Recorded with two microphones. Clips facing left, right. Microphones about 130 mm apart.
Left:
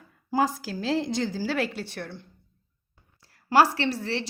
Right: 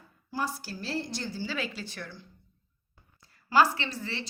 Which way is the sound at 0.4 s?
90° left.